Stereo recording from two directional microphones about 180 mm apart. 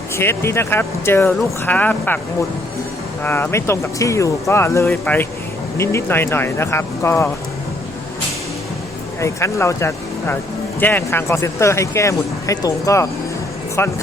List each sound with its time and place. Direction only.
0.2 s speech: 15° left (ahead or behind)
3.2 s speech: 10° left (ahead or behind)
9.2 s speech: 15° left (ahead or behind)